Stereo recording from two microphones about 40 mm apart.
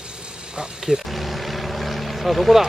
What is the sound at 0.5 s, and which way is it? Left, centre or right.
Speech, centre.